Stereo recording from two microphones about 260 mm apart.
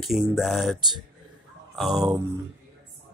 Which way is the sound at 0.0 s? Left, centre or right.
Centre.